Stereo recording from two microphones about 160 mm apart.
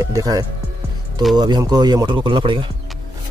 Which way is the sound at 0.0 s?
20° right (ahead or behind).